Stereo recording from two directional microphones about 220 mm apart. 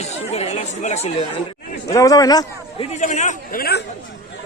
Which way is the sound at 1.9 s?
15° left (ahead or behind).